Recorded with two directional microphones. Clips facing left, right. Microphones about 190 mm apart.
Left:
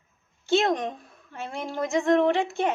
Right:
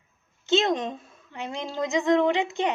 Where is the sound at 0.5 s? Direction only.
20° right (ahead or behind).